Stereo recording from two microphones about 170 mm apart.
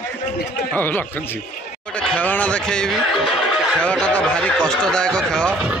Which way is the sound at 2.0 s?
10° left (ahead or behind).